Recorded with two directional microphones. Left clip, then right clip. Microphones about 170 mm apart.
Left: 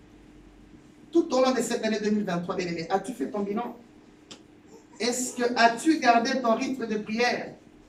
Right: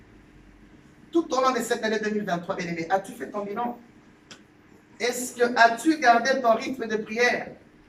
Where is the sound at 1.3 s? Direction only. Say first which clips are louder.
Right 3 dB; centre (ahead or behind).